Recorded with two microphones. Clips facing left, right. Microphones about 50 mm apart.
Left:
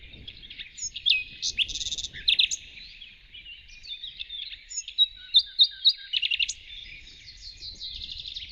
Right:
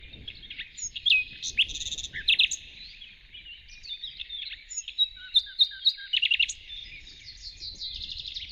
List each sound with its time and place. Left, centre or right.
0.6 s bird vocalization: right
1.4 s bird: right
4.2 s bird vocalization: right
5.8 s chirp: right
7.8 s bird: centre